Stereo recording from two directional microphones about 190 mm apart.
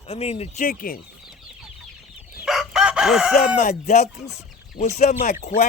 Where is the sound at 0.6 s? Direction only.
45° left (ahead or behind).